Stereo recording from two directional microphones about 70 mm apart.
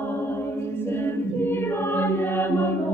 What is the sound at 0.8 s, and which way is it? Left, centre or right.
Choir, left.